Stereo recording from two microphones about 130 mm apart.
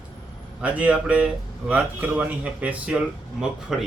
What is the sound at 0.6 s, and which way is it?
A man's voice, 10° right (ahead or behind).